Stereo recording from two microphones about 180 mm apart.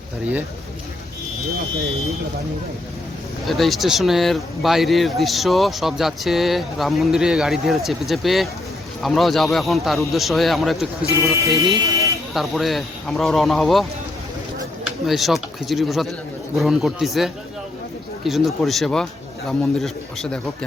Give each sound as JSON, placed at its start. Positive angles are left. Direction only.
{"t": 3.4, "sound": "speech", "side_deg": 0}
{"t": 11.2, "sound": "speech", "side_deg": -15}
{"t": 12.3, "sound": "speech", "side_deg": 0}
{"t": 15.0, "sound": "speech", "side_deg": 0}